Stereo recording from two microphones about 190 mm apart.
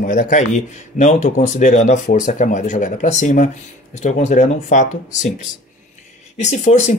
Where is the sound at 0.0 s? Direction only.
45° left (ahead or behind).